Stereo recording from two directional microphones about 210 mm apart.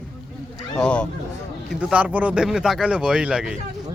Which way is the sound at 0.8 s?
5° left (ahead or behind).